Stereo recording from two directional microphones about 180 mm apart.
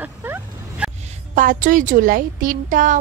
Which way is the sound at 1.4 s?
50° right (ahead or behind).